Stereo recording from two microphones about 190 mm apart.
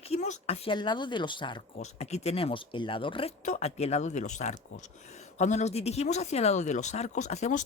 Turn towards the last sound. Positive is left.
turn(degrees=35)  # may be behind; listen again after turning